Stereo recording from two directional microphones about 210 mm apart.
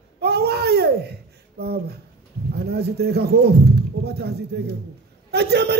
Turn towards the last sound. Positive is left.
turn(degrees=-50)  # may be behind; listen again after turning